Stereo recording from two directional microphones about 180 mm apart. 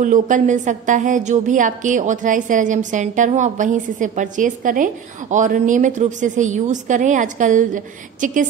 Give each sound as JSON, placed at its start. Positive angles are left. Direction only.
{"t": 0.0, "sound": "a woman's voice", "side_deg": -45}